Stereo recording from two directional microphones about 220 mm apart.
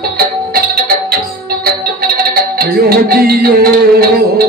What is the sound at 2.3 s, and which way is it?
Music, 45° right (ahead or behind).